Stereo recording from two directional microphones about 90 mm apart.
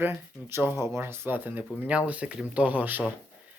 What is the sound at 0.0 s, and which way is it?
Speech, 25° right (ahead or behind).